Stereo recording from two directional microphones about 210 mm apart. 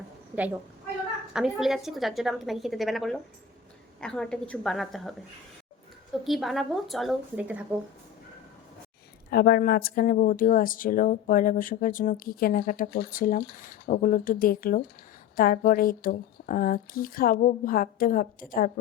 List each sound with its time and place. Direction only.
1.3 s a woman's voice: centre (ahead or behind)
6.2 s a woman's voice: centre (ahead or behind)
9.3 s speech: 50° left (ahead or behind)